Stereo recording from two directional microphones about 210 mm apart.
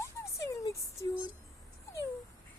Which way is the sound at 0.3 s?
15° left (ahead or behind).